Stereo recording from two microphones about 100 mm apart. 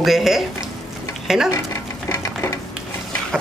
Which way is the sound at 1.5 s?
30° left (ahead or behind).